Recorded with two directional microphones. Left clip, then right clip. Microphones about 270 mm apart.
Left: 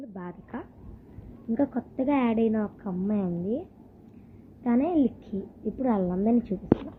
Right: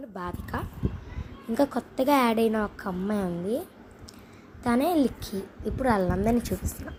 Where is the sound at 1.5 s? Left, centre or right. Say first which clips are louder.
Right 3 dB; centre.